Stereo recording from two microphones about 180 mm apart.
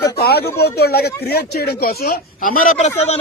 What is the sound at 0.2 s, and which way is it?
Speech, 60° left (ahead or behind).